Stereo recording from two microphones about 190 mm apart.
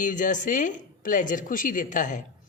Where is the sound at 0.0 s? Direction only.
45° left (ahead or behind).